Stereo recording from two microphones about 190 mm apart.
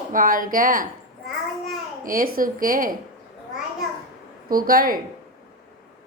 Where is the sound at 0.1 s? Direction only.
45° right (ahead or behind).